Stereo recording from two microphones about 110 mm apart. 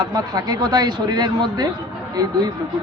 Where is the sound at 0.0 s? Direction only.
35° right (ahead or behind).